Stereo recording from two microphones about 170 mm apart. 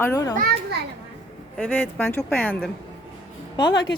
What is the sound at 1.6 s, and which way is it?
Speech, 10° left (ahead or behind).